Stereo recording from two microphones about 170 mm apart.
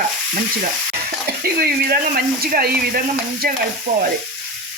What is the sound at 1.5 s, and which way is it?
Speech, 65° right (ahead or behind).